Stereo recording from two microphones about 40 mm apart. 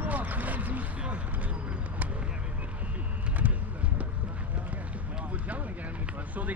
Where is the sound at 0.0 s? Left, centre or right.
Right.